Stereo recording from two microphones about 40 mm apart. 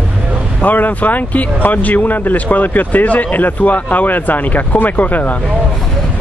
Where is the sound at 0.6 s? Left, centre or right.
Left.